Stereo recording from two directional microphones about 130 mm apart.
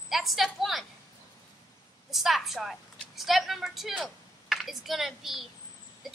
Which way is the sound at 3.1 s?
Centre (ahead or behind).